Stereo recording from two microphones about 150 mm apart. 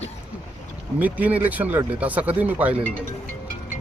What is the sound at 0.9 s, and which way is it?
Speech, 10° right (ahead or behind).